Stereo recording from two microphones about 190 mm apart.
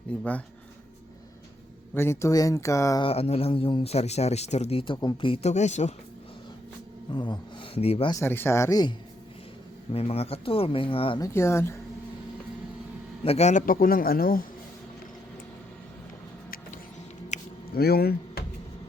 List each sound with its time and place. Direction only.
0.1 s speech: 5° left (ahead or behind)
2.0 s speech: 15° left (ahead or behind)
3.1 s speech: 30° left (ahead or behind)
7.1 s speech: 25° left (ahead or behind)
8.1 s speech: 10° left (ahead or behind)
9.9 s speech: 30° left (ahead or behind)
11.3 s speech: 15° left (ahead or behind)
13.2 s a man's voice: 35° left (ahead or behind); by 14.4 s 50° left (ahead or behind)
17.3 s a sound: 35° left (ahead or behind)
17.7 s speech: 55° left (ahead or behind)